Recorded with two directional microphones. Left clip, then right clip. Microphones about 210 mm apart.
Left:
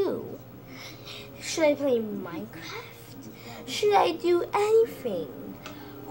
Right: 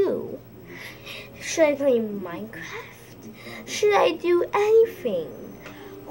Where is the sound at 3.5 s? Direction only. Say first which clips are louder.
Right 3 dB; 10° right (ahead or behind).